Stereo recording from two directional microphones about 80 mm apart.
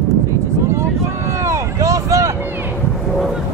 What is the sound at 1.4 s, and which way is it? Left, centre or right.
Vehicle, right.